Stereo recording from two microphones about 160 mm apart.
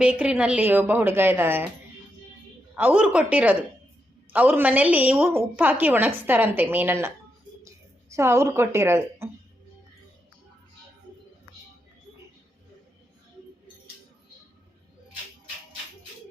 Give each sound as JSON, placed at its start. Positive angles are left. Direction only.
{"t": 0.0, "sound": "a woman's voice", "side_deg": -10}
{"t": 2.7, "sound": "a woman's voice", "side_deg": -10}
{"t": 8.1, "sound": "a woman's voice", "side_deg": -15}